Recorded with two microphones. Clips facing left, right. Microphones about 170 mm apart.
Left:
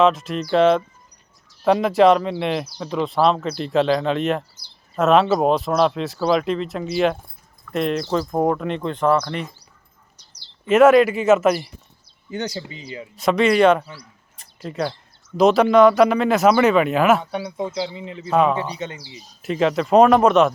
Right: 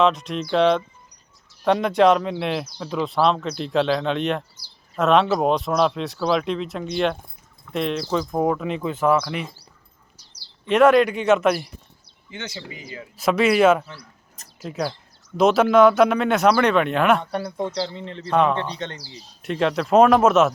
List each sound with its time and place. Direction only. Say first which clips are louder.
0.0 s speech: left 2 dB; centre (ahead or behind)
10.2 s bird: right 1 dB; 10° right (ahead or behind)
10.7 s speech: left 3 dB; 5° left (ahead or behind)
12.3 s speech: left 7 dB; 35° left (ahead or behind)
13.1 s speech: left 1 dB; centre (ahead or behind)
18.9 s speech: left 1 dB; 40° right (ahead or behind)
19.4 s speech: left 2 dB; centre (ahead or behind)